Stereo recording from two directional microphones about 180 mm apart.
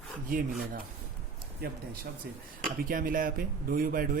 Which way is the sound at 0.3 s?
50° right (ahead or behind).